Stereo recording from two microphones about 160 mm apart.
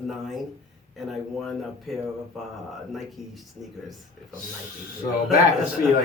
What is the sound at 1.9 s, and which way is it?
Speech, centre (ahead or behind).